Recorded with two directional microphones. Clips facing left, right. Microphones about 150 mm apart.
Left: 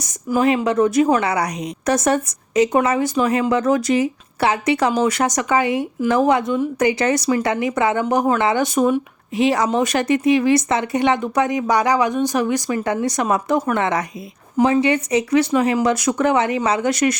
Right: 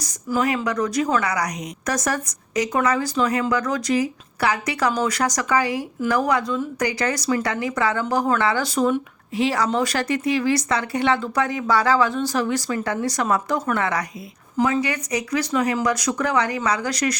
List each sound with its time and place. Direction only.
0.0 s a woman's voice: 20° left (ahead or behind)